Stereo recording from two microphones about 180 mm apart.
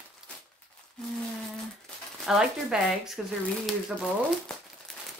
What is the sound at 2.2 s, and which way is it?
Speech, 5° right (ahead or behind).